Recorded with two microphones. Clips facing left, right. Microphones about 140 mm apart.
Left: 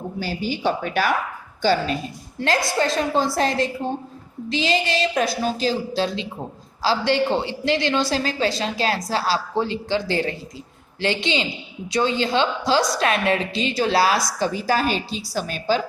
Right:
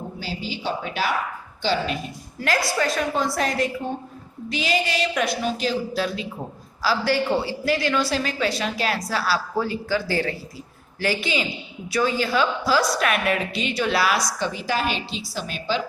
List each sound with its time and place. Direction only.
0.2 s speech: 50° left (ahead or behind)
2.4 s a woman's voice: 25° left (ahead or behind); by 15.8 s 45° left (ahead or behind)